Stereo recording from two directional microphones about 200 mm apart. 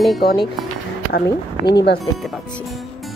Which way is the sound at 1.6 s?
20° left (ahead or behind).